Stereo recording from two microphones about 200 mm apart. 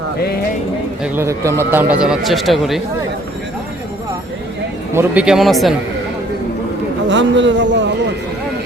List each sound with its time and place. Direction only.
1.0 s speech: 10° right (ahead or behind)
4.9 s speech: 5° right (ahead or behind)
7.1 s speech: 65° right (ahead or behind)